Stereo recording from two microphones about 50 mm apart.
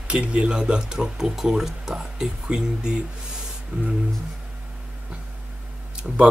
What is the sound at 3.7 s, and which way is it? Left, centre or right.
Music, right.